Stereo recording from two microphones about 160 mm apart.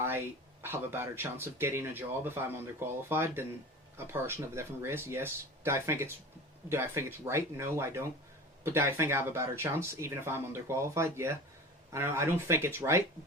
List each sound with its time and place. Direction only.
0.0 s speech: 15° right (ahead or behind)